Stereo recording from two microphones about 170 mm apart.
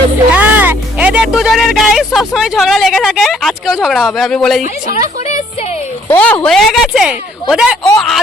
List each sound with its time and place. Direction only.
0.3 s speech: 10° right (ahead or behind)
4.6 s speech: 45° left (ahead or behind)
6.1 s speech: 10° left (ahead or behind)